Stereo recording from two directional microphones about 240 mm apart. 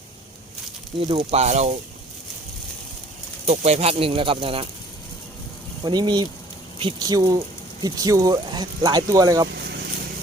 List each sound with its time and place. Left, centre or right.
0.9 s speech: right
3.4 s speech: right
5.8 s speech: centre
9.5 s vehicle: right